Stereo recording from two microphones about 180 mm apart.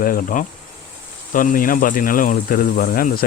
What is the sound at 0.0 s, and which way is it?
Speech, 50° left (ahead or behind).